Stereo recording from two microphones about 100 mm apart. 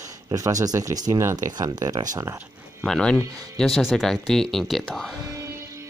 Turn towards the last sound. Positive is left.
turn(degrees=5)  # may be behind; listen again after turning